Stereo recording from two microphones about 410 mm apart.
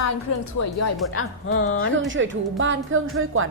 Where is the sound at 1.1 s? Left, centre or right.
Left.